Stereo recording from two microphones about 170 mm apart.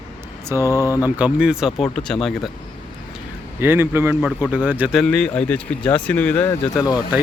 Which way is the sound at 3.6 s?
15° right (ahead or behind).